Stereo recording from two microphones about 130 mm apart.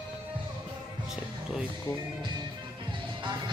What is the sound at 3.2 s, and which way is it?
Music, 35° right (ahead or behind).